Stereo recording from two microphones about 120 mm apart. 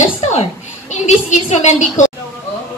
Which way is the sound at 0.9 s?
90° left.